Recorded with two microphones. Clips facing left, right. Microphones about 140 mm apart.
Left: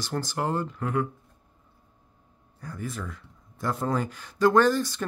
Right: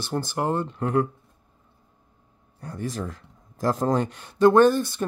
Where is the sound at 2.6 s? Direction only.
30° right (ahead or behind).